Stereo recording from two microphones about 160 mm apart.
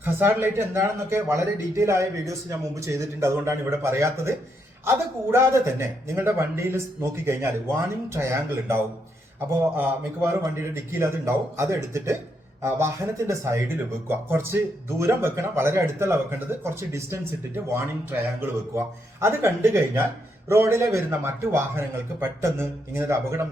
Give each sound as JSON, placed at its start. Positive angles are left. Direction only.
{"t": 0.0, "sound": "speech", "side_deg": -15}
{"t": 18.3, "sound": "speech", "side_deg": -15}